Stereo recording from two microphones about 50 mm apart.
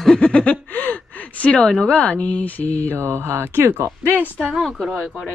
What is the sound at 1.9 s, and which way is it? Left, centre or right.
Speech, left.